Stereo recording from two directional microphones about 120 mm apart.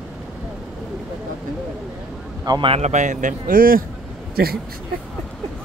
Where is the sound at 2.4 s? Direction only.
35° right (ahead or behind).